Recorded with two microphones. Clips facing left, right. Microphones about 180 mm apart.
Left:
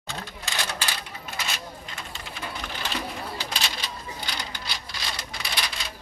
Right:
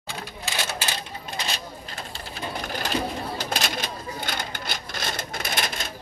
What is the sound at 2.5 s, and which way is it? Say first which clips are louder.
Bird: right 6 dB; 40° right (ahead or behind).